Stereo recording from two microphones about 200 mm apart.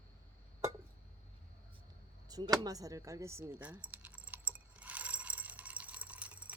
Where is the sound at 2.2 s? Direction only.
20° right (ahead or behind).